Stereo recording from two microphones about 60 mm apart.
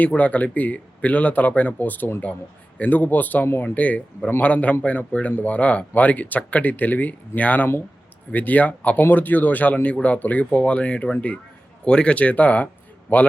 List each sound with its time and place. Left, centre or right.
0.0 s speech: left